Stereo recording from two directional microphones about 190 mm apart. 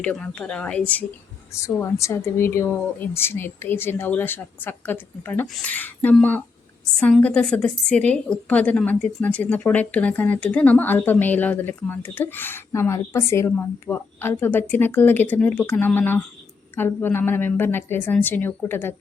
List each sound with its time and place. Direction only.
0.0 s a woman's voice: 5° left (ahead or behind)